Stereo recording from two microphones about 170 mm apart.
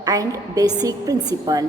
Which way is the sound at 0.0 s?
20° right (ahead or behind).